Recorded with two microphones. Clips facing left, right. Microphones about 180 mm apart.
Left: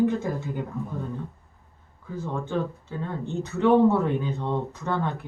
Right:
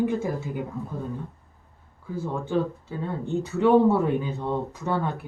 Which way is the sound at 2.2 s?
10° right (ahead or behind).